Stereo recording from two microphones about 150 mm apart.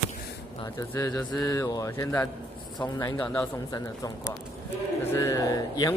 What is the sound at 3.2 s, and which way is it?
Mantra, 10° left (ahead or behind).